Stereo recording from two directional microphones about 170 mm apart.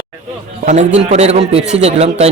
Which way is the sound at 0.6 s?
45° right (ahead or behind).